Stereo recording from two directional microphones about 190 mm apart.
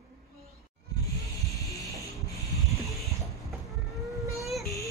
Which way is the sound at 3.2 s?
Centre (ahead or behind).